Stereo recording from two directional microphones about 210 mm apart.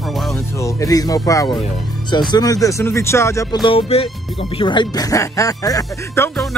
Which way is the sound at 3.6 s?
25° left (ahead or behind).